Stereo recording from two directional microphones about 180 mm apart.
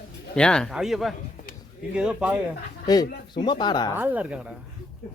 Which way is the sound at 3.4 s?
25° left (ahead or behind).